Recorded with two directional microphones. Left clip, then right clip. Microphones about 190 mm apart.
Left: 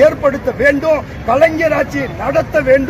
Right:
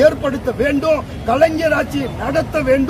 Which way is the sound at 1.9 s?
Centre (ahead or behind).